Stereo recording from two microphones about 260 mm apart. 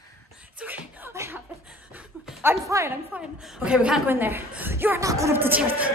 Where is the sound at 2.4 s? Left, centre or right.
Centre.